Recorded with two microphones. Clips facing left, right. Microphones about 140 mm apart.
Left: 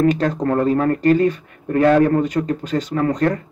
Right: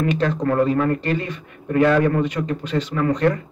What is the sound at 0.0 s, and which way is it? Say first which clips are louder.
Speech: left 3 dB; 40° left (ahead or behind).